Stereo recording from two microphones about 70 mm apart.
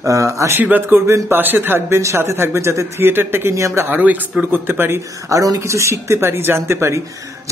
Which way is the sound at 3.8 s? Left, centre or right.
Right.